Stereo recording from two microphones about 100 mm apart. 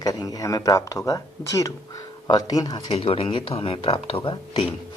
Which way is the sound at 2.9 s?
70° left (ahead or behind).